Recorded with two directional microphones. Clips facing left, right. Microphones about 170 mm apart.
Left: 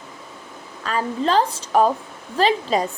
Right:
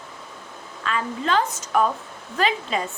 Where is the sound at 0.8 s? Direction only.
35° left (ahead or behind).